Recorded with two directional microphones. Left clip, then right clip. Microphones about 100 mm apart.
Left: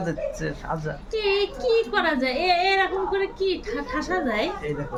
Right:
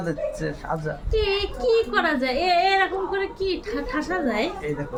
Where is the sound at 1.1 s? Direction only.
40° right (ahead or behind).